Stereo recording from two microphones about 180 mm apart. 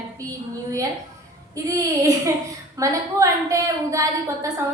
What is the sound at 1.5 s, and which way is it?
A woman's voice, 20° right (ahead or behind).